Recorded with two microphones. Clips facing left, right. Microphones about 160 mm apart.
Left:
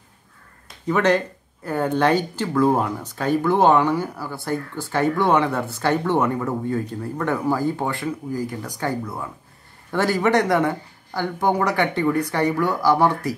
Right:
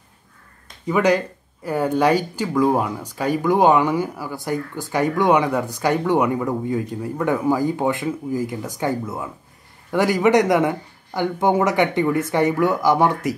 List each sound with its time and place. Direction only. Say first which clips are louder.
0.8 s speech: right 1 dB; 10° right (ahead or behind)